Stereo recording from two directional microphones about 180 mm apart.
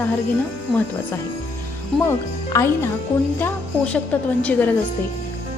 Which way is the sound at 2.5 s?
15° left (ahead or behind).